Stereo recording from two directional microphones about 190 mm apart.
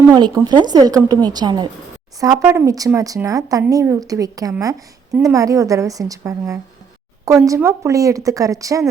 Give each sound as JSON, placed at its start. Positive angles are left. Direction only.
{"t": 0.1, "sound": "a woman's voice", "side_deg": -20}